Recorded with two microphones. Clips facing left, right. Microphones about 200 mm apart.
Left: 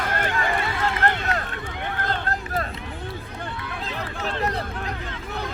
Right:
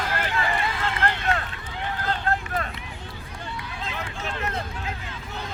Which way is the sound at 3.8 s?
35° left (ahead or behind).